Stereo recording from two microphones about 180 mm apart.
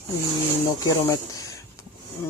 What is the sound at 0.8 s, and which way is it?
Speech, 20° left (ahead or behind).